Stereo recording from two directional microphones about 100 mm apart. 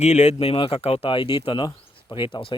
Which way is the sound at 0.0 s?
90° left.